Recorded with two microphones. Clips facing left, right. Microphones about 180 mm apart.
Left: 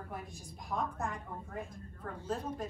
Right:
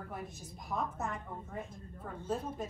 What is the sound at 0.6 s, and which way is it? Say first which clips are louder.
A woman's voice: even; 5° right (ahead or behind).